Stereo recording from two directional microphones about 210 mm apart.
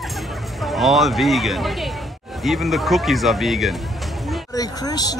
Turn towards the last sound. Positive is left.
turn(degrees=20)  # may be behind; listen again after turning